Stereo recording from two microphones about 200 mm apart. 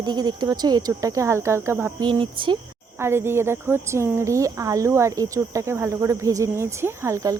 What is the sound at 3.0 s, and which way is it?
Cricket, 10° right (ahead or behind).